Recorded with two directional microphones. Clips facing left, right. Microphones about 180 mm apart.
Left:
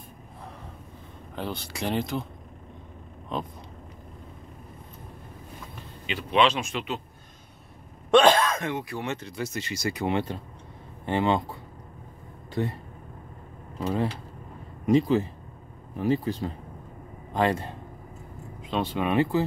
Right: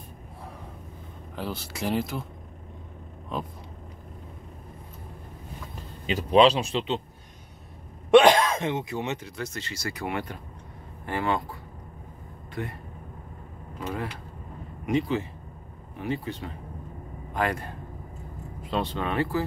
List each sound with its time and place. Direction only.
1.3 s speech: 5° right (ahead or behind)
3.3 s speech: 5° right (ahead or behind)
6.0 s speech: 40° right (ahead or behind)
8.1 s speech: 15° right (ahead or behind)
9.2 s speech: 5° left (ahead or behind); by 11.4 s 20° left (ahead or behind)
13.7 s speech: 30° left (ahead or behind)
18.9 s speech: 15° left (ahead or behind)